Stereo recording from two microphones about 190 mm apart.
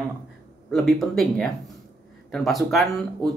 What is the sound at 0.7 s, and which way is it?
Speech, centre (ahead or behind).